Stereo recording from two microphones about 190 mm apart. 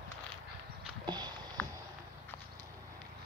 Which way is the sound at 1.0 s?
20° right (ahead or behind).